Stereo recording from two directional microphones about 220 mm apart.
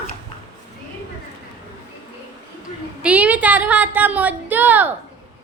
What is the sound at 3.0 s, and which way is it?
A woman's voice, 5° right (ahead or behind).